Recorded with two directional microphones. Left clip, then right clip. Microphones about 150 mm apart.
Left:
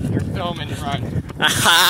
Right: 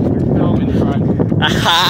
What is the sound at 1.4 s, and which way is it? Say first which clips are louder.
Speech: even; 20° right (ahead or behind).